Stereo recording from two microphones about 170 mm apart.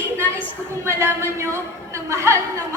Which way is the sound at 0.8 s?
15° right (ahead or behind).